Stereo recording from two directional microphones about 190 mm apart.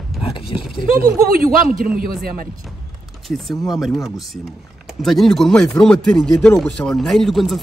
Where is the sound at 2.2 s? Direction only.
50° right (ahead or behind).